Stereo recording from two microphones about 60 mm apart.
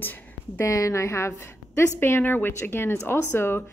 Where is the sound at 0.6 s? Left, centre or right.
Left.